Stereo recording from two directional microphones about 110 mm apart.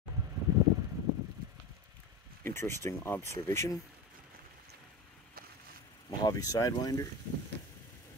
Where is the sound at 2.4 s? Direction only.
25° left (ahead or behind).